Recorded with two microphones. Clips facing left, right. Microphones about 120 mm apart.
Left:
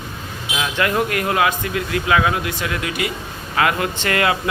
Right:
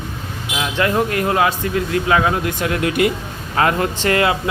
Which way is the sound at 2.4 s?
50° right (ahead or behind).